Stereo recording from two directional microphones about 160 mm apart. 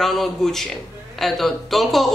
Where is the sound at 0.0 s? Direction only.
Centre (ahead or behind).